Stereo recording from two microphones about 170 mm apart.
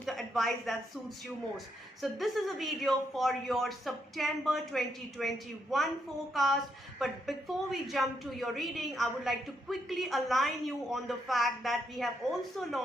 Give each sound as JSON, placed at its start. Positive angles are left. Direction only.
{"t": 0.0, "sound": "a woman's voice", "side_deg": 0}